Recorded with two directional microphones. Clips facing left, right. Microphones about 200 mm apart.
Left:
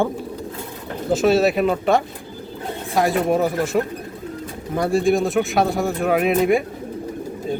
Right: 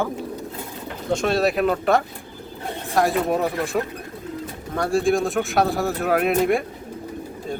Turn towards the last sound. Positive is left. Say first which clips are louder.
# left 2 dB
turn(degrees=0)  # may be behind; listen again after turning